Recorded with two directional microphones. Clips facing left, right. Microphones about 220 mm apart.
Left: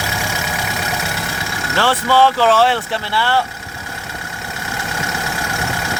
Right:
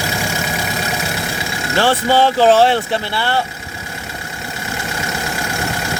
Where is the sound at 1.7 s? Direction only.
20° right (ahead or behind).